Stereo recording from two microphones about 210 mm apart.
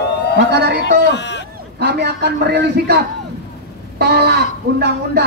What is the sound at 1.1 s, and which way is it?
Speech, 55° left (ahead or behind).